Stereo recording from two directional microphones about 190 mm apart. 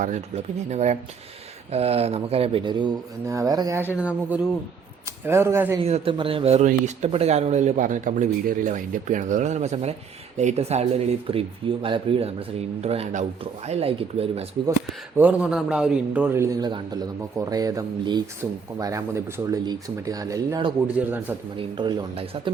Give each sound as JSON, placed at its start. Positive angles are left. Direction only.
{"t": 0.0, "sound": "a man's voice", "side_deg": -40}
{"t": 3.9, "sound": "a man's voice", "side_deg": -5}
{"t": 5.8, "sound": "a man's voice", "side_deg": -30}
{"t": 14.8, "sound": "a man's voice", "side_deg": -5}
{"t": 20.8, "sound": "a man's voice", "side_deg": -10}
{"t": 21.5, "sound": "speech", "side_deg": -25}